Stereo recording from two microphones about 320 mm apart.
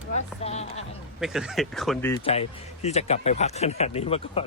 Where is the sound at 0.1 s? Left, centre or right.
Centre.